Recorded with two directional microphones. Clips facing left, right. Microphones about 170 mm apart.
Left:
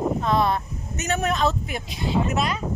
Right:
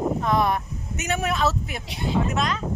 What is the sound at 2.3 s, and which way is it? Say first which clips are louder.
Speech: left 1 dB; 10° left (ahead or behind).